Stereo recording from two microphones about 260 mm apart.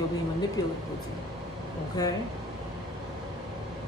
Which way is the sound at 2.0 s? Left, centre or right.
Centre.